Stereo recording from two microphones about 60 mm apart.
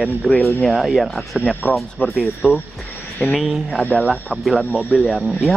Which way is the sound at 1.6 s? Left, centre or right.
Left.